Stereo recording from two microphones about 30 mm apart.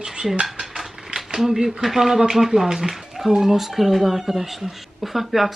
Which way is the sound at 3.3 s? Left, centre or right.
Right.